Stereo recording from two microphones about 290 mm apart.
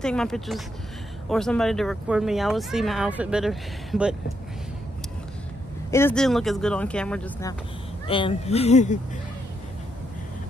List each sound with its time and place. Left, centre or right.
0.0 s speech: centre
5.9 s speech: centre
8.1 s speech: centre